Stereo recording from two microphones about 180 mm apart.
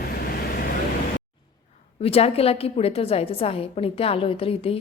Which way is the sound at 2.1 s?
35° left (ahead or behind).